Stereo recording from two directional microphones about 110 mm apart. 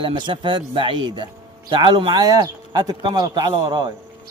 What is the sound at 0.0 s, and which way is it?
A man's voice, 50° right (ahead or behind).